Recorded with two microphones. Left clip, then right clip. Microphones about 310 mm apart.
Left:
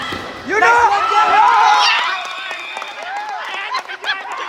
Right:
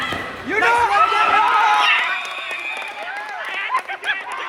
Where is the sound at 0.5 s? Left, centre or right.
Left.